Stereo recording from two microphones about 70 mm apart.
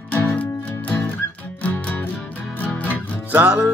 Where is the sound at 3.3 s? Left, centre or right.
Right.